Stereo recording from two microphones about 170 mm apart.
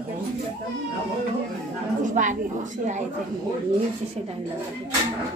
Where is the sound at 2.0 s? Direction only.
50° right (ahead or behind).